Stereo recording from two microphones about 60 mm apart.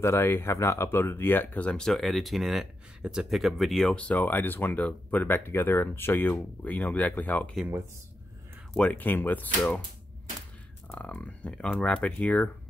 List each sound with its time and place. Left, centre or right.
0.0 s speech: left
1.9 s speech: centre
3.9 s speech: left
6.6 s speech: left
8.7 s speech: left
11.1 s speech: left
11.5 s speech: centre
11.8 s speech: left